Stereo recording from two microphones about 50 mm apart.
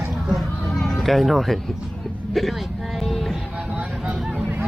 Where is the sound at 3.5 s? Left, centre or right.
Right.